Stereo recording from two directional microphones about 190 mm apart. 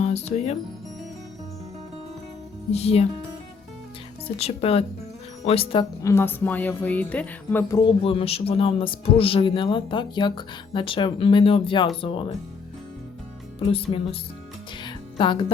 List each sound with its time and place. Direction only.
0.0 s music: 35° left (ahead or behind)
2.7 s speech: 30° left (ahead or behind)
4.4 s speech: 30° left (ahead or behind)
6.0 s music: 15° left (ahead or behind)
7.9 s speech: 30° left (ahead or behind)
13.6 s speech: 30° left (ahead or behind)
14.8 s music: 25° left (ahead or behind)